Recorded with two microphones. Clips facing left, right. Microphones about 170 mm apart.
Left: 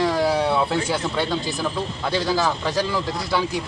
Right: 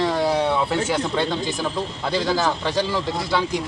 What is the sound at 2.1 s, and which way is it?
Speech, centre (ahead or behind).